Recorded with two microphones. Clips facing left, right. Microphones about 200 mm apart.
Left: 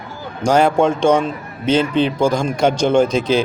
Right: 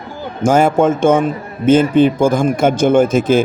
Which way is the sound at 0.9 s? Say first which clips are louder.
Right 2 dB; 50° right (ahead or behind).